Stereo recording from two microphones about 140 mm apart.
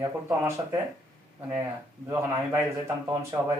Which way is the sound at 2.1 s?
20° right (ahead or behind).